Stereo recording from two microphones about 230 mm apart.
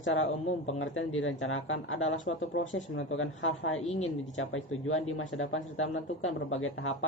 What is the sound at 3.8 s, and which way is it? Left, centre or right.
Speech, left.